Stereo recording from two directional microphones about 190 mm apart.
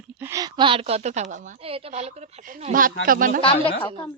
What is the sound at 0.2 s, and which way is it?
A woman's voice, 15° right (ahead or behind).